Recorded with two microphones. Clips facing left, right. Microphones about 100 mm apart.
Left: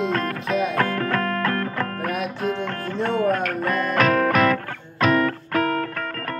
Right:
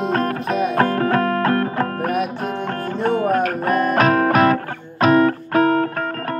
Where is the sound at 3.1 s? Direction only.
20° right (ahead or behind).